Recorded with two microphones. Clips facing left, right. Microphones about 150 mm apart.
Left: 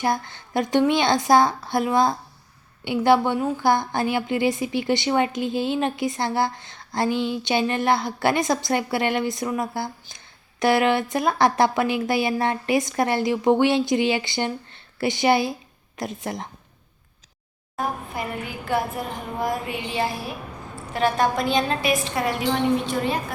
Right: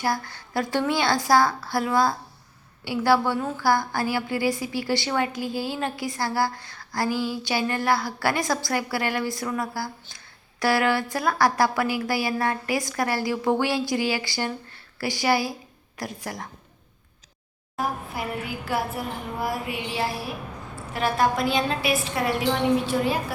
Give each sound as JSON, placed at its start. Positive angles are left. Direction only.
{"t": 0.0, "sound": "a woman's voice", "side_deg": 20}
{"t": 17.7, "sound": "a woman's voice", "side_deg": -5}